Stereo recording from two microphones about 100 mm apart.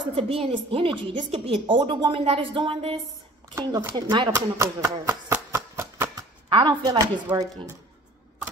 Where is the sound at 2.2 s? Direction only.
65° right (ahead or behind).